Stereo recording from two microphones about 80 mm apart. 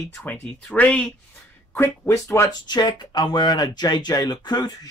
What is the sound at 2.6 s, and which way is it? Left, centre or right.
Speech, left.